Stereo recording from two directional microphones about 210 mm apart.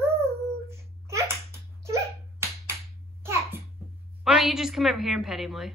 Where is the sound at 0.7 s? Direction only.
15° right (ahead or behind).